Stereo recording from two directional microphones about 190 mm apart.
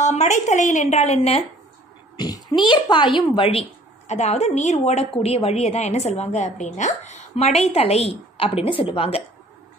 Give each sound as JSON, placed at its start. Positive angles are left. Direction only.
{"t": 0.0, "sound": "a woman's voice", "side_deg": 35}
{"t": 2.1, "sound": "a child's voice", "side_deg": 20}